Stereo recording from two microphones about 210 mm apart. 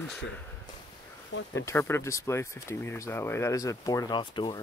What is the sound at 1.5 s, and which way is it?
Speech, 10° left (ahead or behind).